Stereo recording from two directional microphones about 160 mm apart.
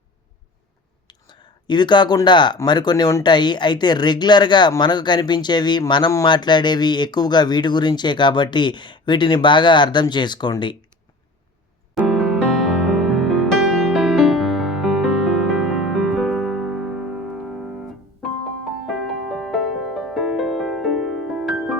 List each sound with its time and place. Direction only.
1.0 s speech: 30° left (ahead or behind)
12.0 s music: centre (ahead or behind)
18.9 s music: centre (ahead or behind)